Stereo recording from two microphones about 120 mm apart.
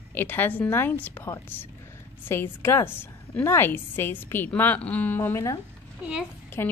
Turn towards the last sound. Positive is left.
turn(degrees=20)  # may be behind; listen again after turning